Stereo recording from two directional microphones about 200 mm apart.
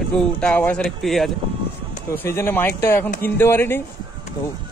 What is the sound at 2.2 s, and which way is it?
Speech, 10° left (ahead or behind).